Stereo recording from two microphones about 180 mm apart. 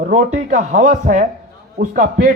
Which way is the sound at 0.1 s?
40° right (ahead or behind).